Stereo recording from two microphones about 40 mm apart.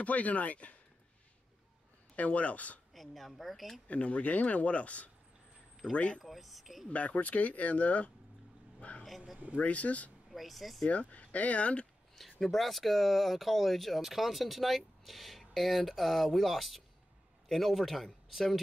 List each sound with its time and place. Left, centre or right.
0.0 s speech: left
2.1 s speech: left
2.9 s speech: centre
3.8 s speech: left
6.2 s speech: centre
6.9 s speech: left
8.8 s vehicle: left
9.6 s speech: left
10.3 s speech: centre
10.9 s speech: left
12.2 s speech: centre